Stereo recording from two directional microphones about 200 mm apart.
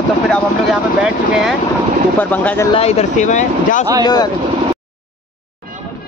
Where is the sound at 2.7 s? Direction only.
30° left (ahead or behind).